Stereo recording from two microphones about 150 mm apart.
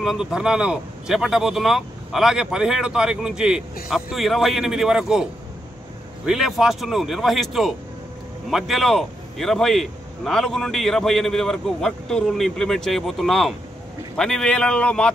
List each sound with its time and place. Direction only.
0.0 s a man's voice: 5° right (ahead or behind)